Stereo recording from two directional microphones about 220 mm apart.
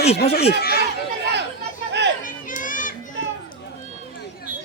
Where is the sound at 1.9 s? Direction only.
50° right (ahead or behind).